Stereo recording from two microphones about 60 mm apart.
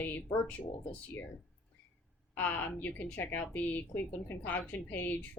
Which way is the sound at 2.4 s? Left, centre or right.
Left.